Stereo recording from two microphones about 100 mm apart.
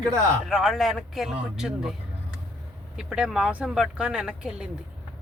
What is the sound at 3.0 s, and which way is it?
Speech, 10° right (ahead or behind).